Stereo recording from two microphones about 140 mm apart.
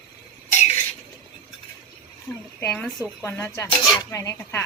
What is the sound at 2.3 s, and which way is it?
Speech, 15° left (ahead or behind).